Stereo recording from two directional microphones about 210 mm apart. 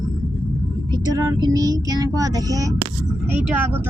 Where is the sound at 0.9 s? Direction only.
20° right (ahead or behind).